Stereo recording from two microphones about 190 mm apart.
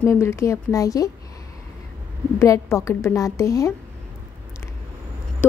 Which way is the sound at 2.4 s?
15° left (ahead or behind).